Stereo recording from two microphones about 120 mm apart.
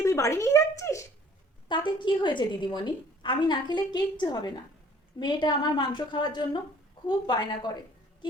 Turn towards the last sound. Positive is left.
turn(degrees=35)  # may be behind; listen again after turning